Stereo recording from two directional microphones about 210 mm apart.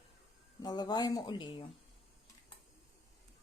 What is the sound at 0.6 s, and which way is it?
Speech, 20° left (ahead or behind).